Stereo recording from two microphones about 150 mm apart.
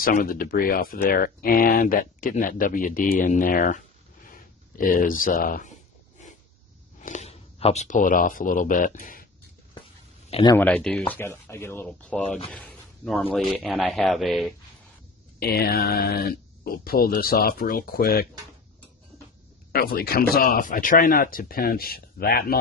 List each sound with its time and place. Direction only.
0.0 s speech: 75° left (ahead or behind)
7.0 s speech: 50° left (ahead or behind)
10.6 s speech: 10° left (ahead or behind)
12.4 s a sound: 10° left (ahead or behind)
13.3 s speech: centre (ahead or behind)
15.3 s speech: 90° left
19.7 s speech: 90° left
20.3 s speech: 75° left (ahead or behind)